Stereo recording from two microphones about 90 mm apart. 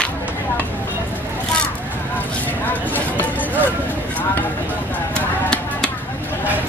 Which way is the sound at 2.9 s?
20° left (ahead or behind).